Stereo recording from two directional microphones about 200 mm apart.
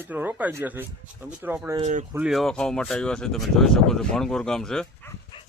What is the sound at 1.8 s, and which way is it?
Speech, 40° right (ahead or behind).